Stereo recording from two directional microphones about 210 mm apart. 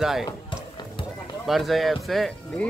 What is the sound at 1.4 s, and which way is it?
Speech, centre (ahead or behind).